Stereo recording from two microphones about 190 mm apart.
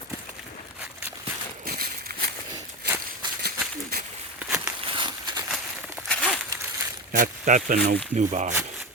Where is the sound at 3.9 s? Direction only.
55° right (ahead or behind).